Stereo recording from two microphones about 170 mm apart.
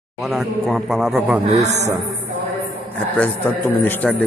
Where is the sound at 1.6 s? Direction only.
40° right (ahead or behind).